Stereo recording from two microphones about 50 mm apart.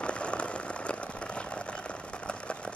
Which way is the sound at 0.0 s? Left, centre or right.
Left.